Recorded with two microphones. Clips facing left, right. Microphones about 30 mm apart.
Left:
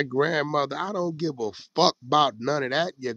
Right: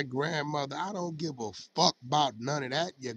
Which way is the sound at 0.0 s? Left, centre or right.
Centre.